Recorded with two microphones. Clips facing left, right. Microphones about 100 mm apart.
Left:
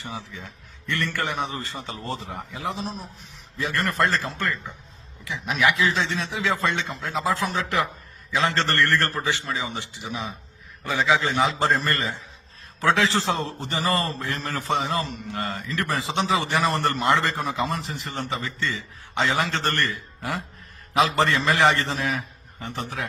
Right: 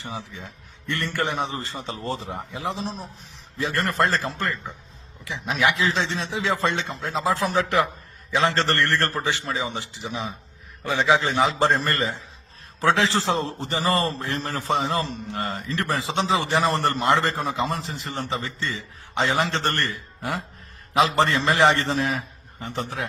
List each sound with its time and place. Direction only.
0.0 s a man's voice: 25° right (ahead or behind)